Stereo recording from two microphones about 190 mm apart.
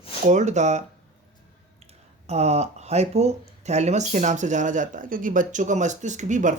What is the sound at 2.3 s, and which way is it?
Speech, 35° right (ahead or behind).